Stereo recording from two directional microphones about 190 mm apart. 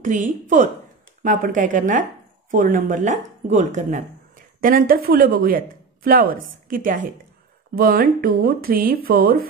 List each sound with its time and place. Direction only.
0.0 s speech: 40° right (ahead or behind)